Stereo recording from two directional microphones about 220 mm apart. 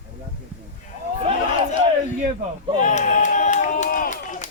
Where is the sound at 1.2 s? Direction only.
25° right (ahead or behind).